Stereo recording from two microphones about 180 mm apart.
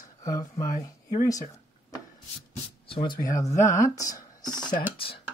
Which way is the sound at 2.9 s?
25° left (ahead or behind).